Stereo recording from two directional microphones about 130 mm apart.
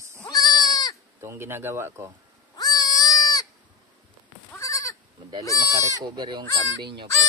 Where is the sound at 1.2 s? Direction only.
20° right (ahead or behind).